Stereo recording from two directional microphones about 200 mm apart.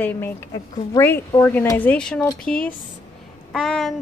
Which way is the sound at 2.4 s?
5° left (ahead or behind).